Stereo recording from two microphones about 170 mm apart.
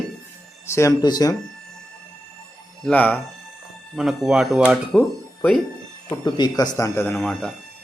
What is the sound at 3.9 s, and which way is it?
Speech, centre (ahead or behind).